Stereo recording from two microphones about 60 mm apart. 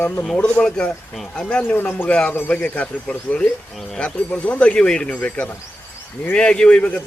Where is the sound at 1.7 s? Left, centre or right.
Left.